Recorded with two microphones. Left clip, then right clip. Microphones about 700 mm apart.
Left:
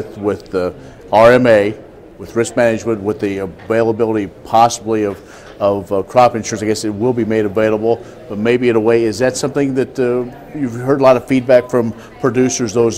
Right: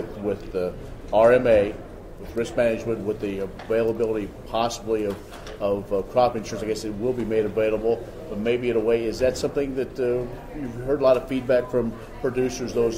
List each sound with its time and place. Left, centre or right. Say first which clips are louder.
0.5 s a man's voice: left 9 dB; left